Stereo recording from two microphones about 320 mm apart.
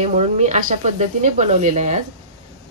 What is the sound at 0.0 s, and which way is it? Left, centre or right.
Speech, right.